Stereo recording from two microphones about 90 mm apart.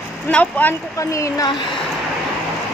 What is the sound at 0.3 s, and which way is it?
Speech, 15° left (ahead or behind).